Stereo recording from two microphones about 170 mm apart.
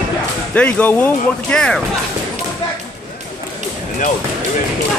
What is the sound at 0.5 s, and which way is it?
Speech, 5° left (ahead or behind).